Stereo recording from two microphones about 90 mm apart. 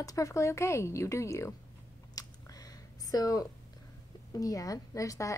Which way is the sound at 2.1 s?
45° left (ahead or behind).